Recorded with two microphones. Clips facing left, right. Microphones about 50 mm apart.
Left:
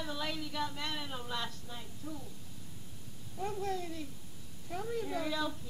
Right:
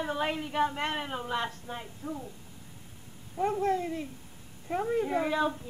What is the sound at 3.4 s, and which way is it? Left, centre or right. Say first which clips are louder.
Female singing: right 9 dB; right.